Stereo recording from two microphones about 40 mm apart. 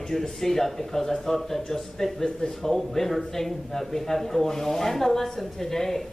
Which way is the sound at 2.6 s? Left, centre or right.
Centre.